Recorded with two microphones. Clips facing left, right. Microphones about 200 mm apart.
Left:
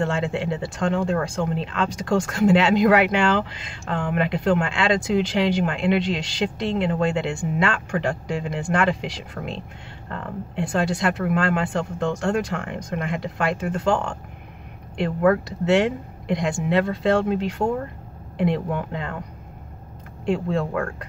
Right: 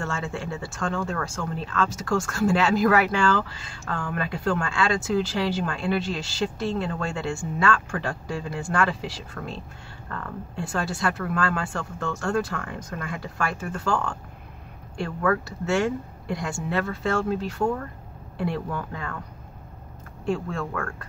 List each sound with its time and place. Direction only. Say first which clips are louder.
0.0 s speech: left 7 dB; 20° left (ahead or behind)
20.2 s speech: left 5 dB; 20° left (ahead or behind)